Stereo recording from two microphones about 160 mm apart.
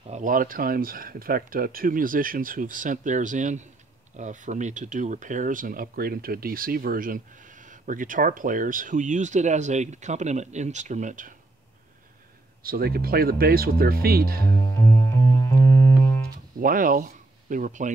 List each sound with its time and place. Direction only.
0.0 s speech: 50° right (ahead or behind)
12.6 s speech: 70° right (ahead or behind)
14.8 s music: 15° left (ahead or behind)
16.5 s speech: 60° right (ahead or behind)